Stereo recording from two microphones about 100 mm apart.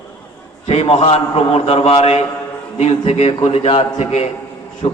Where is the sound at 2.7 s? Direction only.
80° left.